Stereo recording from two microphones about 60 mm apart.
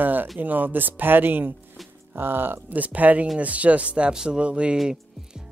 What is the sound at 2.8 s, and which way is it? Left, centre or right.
Speech, right.